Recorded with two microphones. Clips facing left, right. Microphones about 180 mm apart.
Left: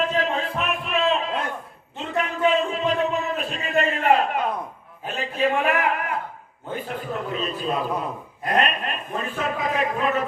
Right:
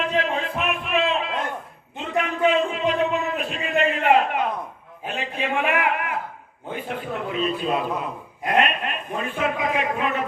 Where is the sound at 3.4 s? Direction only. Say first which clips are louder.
Right 1 dB; 40° left (ahead or behind).